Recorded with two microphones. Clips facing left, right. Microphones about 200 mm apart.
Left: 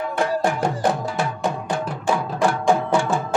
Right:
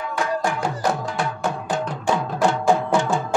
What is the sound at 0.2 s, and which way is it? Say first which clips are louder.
Music: left 2 dB; 35° left (ahead or behind).